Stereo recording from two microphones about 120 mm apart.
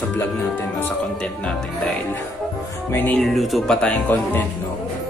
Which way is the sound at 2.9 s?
15° left (ahead or behind).